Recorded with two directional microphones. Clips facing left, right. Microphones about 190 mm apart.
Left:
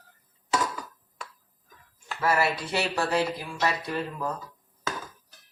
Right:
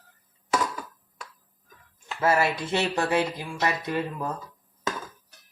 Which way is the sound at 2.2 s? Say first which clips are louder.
Right 2 dB; 20° right (ahead or behind).